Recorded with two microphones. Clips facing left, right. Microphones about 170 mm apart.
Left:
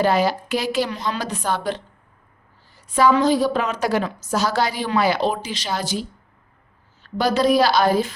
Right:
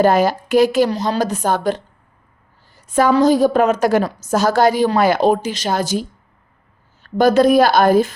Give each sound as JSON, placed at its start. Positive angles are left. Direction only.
{"t": 0.0, "sound": "a woman's voice", "side_deg": -45}